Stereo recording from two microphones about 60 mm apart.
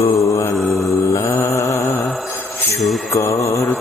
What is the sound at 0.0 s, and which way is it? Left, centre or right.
Mantra, left.